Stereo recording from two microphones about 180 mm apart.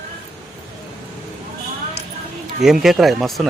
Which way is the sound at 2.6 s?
Centre (ahead or behind).